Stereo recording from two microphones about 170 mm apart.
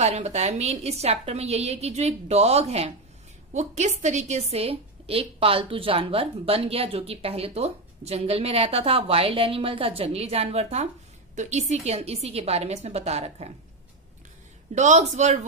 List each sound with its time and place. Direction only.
0.0 s a woman's voice: 40° right (ahead or behind)
14.7 s speech: 45° right (ahead or behind)